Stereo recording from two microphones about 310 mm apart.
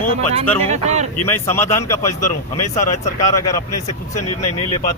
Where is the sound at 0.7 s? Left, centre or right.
Right.